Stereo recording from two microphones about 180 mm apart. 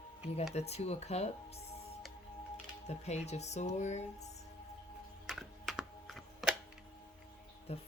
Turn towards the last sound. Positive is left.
turn(degrees=35)  # may be behind; listen again after turning